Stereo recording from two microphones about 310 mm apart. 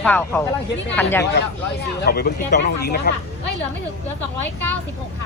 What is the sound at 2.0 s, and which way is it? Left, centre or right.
Speech, left.